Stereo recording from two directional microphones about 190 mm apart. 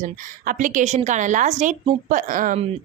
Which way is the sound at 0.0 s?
40° right (ahead or behind).